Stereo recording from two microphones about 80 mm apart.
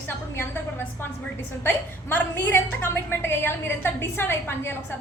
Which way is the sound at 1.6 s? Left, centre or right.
Left.